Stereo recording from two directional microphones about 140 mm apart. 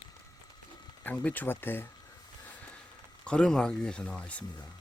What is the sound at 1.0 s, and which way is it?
Speech, 10° left (ahead or behind).